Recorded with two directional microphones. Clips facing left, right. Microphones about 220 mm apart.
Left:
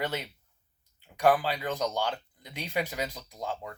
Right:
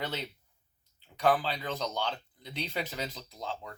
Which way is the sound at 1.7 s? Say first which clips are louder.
Left 4 dB; 45° left (ahead or behind).